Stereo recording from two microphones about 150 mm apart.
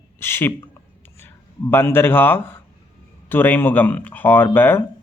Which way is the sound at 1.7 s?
15° left (ahead or behind).